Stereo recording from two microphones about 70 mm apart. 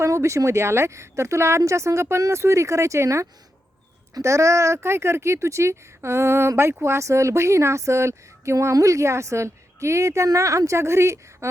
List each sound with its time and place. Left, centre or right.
0.0 s speech: right